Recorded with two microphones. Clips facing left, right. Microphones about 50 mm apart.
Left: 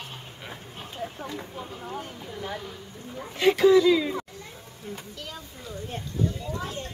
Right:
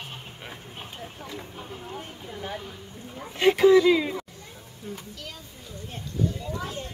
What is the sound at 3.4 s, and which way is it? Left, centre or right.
Speech, right.